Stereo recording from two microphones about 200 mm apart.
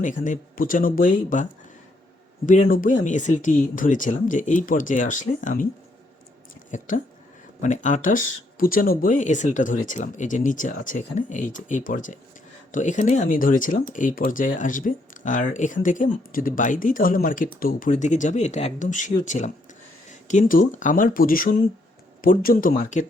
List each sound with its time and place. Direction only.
0.0 s speech: 40° left (ahead or behind)
2.5 s speech: 45° left (ahead or behind)
6.7 s speech: 40° left (ahead or behind)